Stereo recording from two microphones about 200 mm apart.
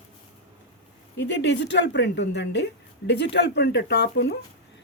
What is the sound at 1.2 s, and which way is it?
A woman's voice, 65° left (ahead or behind).